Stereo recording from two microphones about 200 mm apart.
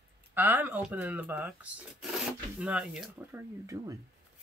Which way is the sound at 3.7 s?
15° right (ahead or behind).